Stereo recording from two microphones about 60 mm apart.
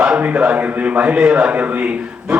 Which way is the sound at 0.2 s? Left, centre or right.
Right.